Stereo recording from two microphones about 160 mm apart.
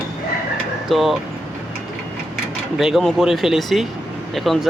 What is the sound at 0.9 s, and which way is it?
Speech, centre (ahead or behind).